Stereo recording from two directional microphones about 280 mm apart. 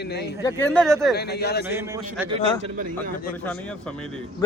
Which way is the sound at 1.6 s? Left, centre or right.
Centre.